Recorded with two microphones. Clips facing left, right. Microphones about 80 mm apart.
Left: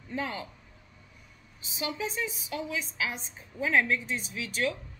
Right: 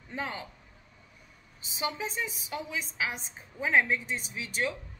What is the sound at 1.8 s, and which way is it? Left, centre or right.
A woman's voice, right.